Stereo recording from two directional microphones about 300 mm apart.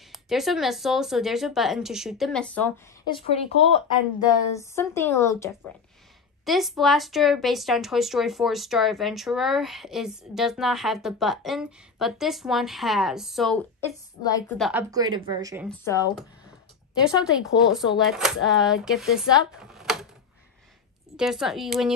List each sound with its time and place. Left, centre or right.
0.1 s speech: centre
3.1 s speech: centre
14.6 s a woman's voice: centre
15.8 s speech: centre
17.0 s speech: centre
21.2 s speech: centre